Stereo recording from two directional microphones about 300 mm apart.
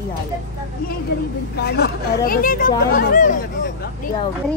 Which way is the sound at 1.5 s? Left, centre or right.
Left.